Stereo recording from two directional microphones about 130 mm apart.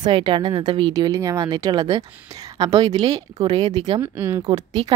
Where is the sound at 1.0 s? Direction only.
25° right (ahead or behind).